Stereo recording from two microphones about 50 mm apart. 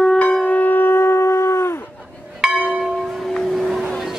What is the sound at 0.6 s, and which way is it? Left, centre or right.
Shofar, left.